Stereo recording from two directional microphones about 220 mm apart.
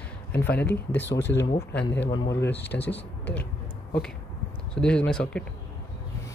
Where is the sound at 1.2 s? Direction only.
55° left (ahead or behind).